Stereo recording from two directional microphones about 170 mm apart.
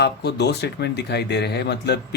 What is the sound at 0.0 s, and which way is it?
Speech, 75° left (ahead or behind).